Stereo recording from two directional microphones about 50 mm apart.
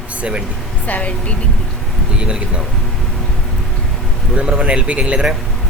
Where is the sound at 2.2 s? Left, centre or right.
Centre.